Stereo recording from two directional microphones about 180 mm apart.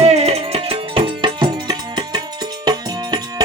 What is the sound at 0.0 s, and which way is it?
Music, 35° right (ahead or behind).